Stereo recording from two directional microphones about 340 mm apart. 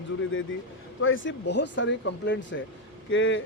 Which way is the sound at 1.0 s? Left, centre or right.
Left.